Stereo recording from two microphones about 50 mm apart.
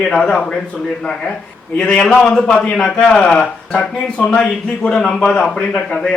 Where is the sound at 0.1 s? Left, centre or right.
Centre.